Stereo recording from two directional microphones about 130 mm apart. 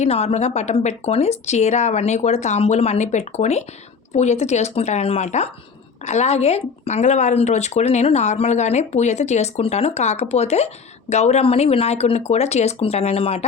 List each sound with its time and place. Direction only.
0.0 s speech: 55° left (ahead or behind)